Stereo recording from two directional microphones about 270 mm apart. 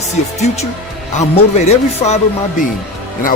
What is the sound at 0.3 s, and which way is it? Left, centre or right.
A man's voice, left.